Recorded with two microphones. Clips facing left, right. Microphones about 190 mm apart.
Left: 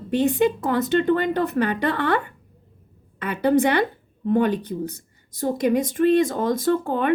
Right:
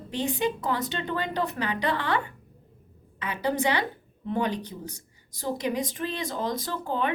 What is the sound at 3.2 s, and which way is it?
A woman's voice, 55° left (ahead or behind).